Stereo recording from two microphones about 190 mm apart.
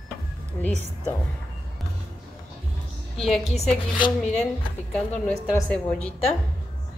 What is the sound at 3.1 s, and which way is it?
Speech, centre (ahead or behind).